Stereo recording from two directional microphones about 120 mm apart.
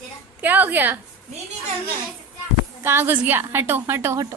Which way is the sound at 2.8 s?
20° right (ahead or behind).